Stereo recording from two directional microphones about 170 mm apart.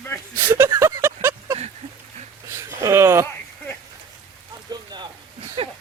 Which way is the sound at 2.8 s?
15° right (ahead or behind).